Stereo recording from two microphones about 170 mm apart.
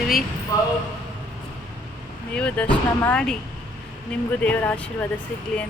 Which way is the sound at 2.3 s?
5° left (ahead or behind).